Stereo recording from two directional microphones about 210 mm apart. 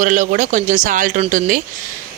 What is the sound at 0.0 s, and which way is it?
Speech, 40° right (ahead or behind).